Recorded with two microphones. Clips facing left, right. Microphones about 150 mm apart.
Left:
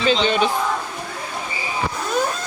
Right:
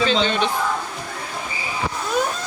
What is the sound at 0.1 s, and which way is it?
Speech, 10° left (ahead or behind).